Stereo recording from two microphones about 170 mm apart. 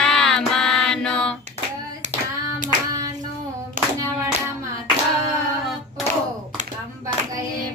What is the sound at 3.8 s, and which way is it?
Clapping, 50° right (ahead or behind).